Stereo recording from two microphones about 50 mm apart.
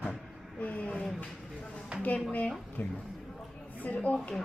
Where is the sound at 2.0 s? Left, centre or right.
Left.